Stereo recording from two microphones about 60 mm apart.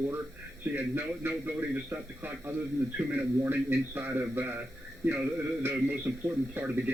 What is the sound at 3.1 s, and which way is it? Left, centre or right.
A man's voice, right.